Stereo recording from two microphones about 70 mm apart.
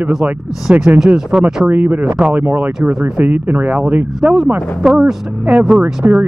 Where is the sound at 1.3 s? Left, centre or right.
Centre.